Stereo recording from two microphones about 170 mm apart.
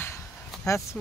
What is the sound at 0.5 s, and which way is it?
Vehicle, centre (ahead or behind).